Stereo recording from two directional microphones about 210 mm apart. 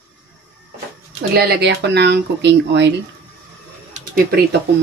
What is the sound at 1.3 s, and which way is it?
Speech, 50° right (ahead or behind).